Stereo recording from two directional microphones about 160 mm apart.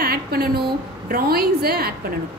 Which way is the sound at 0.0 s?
70° right (ahead or behind).